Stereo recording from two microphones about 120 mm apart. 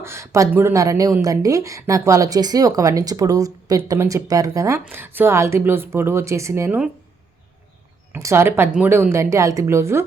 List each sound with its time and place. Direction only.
0.0 s a woman's voice: 20° right (ahead or behind)
6.7 s speech: 10° right (ahead or behind)
8.1 s a woman's voice: 20° right (ahead or behind)